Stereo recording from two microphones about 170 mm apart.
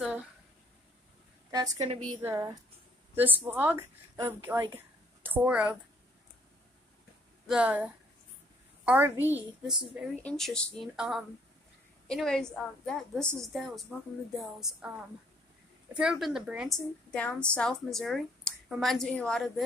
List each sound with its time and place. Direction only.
1.5 s a woman's voice: 20° right (ahead or behind)
7.4 s a woman's voice: 5° right (ahead or behind)
15.9 s a woman's voice: 5° right (ahead or behind)